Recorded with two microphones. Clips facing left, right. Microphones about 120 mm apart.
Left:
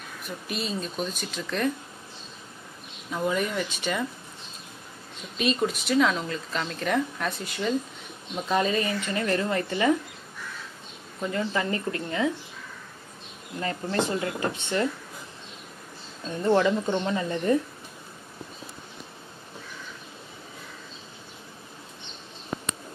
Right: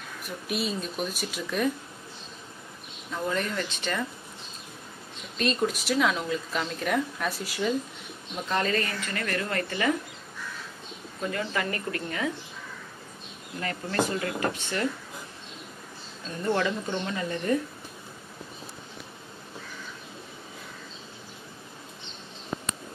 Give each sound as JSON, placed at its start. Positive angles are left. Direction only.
{"t": 0.5, "sound": "a woman's voice", "side_deg": -5}
{"t": 3.1, "sound": "speech", "side_deg": 10}
{"t": 5.4, "sound": "a woman's voice", "side_deg": 0}
{"t": 8.5, "sound": "a woman's voice", "side_deg": 15}
{"t": 11.3, "sound": "a woman's voice", "side_deg": 25}
{"t": 13.6, "sound": "a woman's voice", "side_deg": 25}
{"t": 16.4, "sound": "a woman's voice", "side_deg": 25}